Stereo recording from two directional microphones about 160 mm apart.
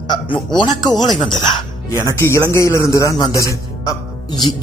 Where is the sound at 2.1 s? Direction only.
15° left (ahead or behind).